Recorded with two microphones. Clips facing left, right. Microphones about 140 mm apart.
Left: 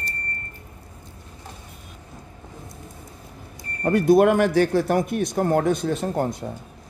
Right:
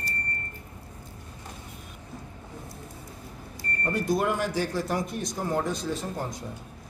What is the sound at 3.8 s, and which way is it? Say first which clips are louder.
Speech: left 10 dB; 65° left (ahead or behind).